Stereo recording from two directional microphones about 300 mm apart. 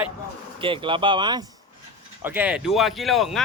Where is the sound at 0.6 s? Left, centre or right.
Centre.